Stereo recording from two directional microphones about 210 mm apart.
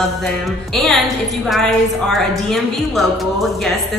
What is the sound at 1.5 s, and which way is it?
A woman's voice, centre (ahead or behind).